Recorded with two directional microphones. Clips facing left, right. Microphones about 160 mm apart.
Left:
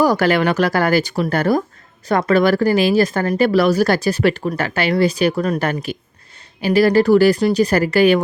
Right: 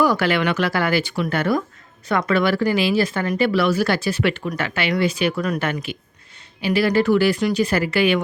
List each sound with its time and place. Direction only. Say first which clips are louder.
0.0 s speech: left 4 dB; 40° left (ahead or behind)